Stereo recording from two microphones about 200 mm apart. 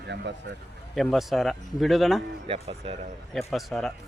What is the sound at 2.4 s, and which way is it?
Speech, 30° right (ahead or behind).